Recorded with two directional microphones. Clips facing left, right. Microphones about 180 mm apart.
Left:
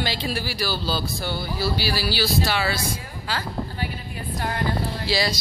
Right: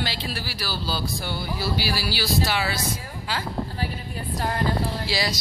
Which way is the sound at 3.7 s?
35° right (ahead or behind).